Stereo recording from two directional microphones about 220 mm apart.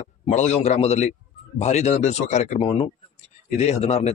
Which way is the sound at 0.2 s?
30° left (ahead or behind).